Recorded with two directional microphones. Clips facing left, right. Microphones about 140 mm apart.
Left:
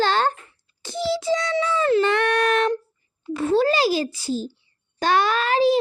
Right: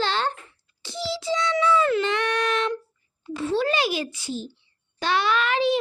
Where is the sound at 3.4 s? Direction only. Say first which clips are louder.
Left 5 dB; 45° left (ahead or behind).